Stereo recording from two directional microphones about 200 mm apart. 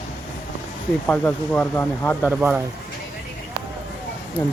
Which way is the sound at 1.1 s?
10° left (ahead or behind).